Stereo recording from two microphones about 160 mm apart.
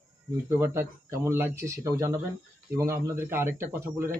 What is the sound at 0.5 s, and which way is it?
Speech, 15° right (ahead or behind).